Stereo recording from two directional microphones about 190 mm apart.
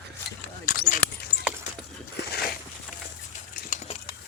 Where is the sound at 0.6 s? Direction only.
45° left (ahead or behind).